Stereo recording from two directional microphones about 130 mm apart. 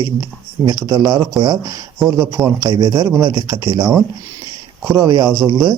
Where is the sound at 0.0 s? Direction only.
30° right (ahead or behind).